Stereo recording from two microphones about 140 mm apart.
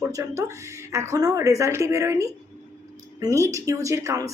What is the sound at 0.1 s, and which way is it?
A woman's voice, 20° right (ahead or behind).